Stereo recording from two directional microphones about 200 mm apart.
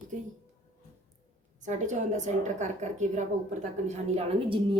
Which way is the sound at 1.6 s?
35° right (ahead or behind).